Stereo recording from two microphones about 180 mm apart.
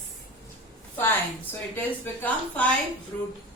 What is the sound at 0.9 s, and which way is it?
A woman's voice, 10° left (ahead or behind).